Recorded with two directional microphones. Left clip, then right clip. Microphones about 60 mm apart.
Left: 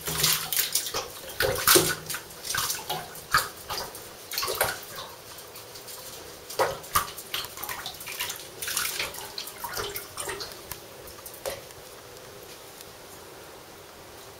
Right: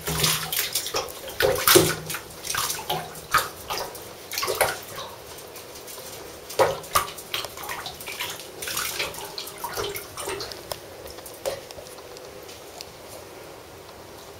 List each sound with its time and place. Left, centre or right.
0.0 s bathtub: centre
6.5 s bathtub: centre